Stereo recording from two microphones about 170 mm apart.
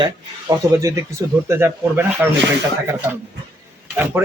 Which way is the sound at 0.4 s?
20° right (ahead or behind).